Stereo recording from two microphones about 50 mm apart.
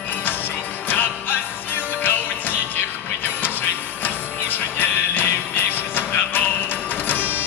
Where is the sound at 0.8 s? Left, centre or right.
Left.